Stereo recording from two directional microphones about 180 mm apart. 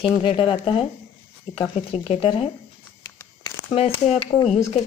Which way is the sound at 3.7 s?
35° left (ahead or behind).